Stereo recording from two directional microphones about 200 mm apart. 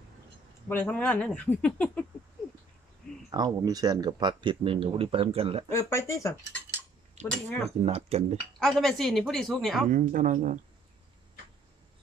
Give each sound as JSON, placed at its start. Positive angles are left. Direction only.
{"t": 0.7, "sound": "speech", "side_deg": 10}
{"t": 3.3, "sound": "speech", "side_deg": -20}
{"t": 5.7, "sound": "speech", "side_deg": 15}
{"t": 7.8, "sound": "speech", "side_deg": -30}
{"t": 8.5, "sound": "a woman's voice", "side_deg": 0}
{"t": 9.8, "sound": "speech", "side_deg": -40}